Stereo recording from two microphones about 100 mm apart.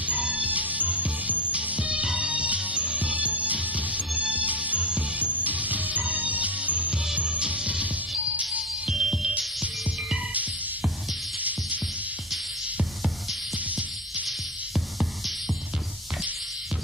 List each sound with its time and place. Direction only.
0.0 s music: 15° right (ahead or behind)
13.7 s music: 15° right (ahead or behind)
14.2 s music: centre (ahead or behind)